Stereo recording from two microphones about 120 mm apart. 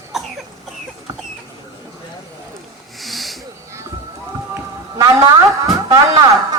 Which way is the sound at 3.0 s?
Centre (ahead or behind).